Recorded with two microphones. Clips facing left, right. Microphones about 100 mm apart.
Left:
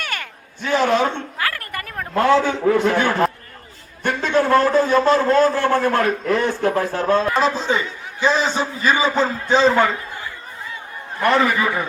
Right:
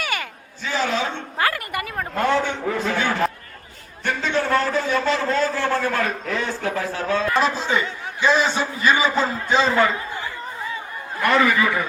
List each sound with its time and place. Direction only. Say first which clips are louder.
0.0 s a sound: right 2 dB; 5° right (ahead or behind)
0.6 s a man's voice: left 6 dB; 60° left (ahead or behind)
1.5 s a sound: right 2 dB; 10° right (ahead or behind)
2.1 s a man's voice: left 5 dB; 90° left; by 7.3 s 50° left (ahead or behind)
7.3 s a man's voice: left 2 dB; 35° left (ahead or behind)
11.2 s a man's voice: left 1 dB; 30° left (ahead or behind)